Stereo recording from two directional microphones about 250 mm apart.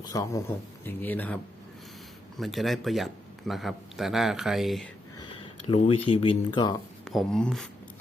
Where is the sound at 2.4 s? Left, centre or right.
Centre.